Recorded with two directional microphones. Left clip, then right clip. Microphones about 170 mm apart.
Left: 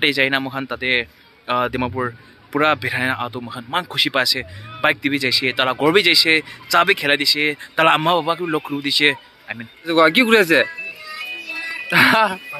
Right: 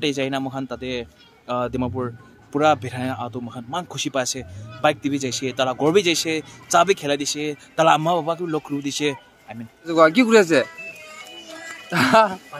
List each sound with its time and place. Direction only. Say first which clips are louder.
0.0 s speech: left 6 dB; centre (ahead or behind)
2.0 s a man's voice: left 4 dB; 10° left (ahead or behind)
2.6 s speech: left 2 dB; centre (ahead or behind)
3.3 s a man's voice: left 3 dB; 30° left (ahead or behind)
3.9 s speech: left 8 dB; centre (ahead or behind)
8.0 s a man's voice: left 4 dB; 35° left (ahead or behind)
8.8 s speech: left 8 dB; centre (ahead or behind)
11.9 s speech: left 2 dB; centre (ahead or behind)